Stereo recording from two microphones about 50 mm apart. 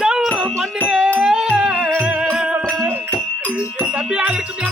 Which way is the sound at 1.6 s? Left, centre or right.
Right.